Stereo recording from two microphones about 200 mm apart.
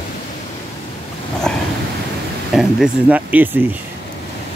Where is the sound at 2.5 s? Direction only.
Centre (ahead or behind).